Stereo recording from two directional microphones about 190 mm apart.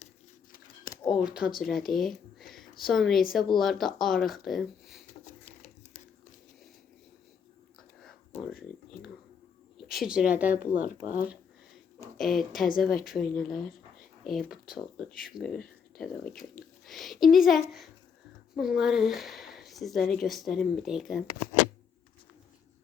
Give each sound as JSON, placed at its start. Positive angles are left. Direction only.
{"t": 1.1, "sound": "speech", "side_deg": -5}
{"t": 5.2, "sound": "a sound", "side_deg": 35}
{"t": 8.3, "sound": "a sound", "side_deg": 35}
{"t": 9.7, "sound": "a woman's voice", "side_deg": 0}
{"t": 10.8, "sound": "speech", "side_deg": 45}
{"t": 12.1, "sound": "speech", "side_deg": 0}